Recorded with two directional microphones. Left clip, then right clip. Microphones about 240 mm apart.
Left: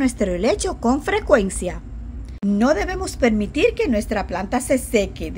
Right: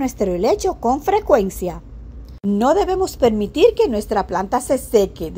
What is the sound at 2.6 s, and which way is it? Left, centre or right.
A woman's voice, centre.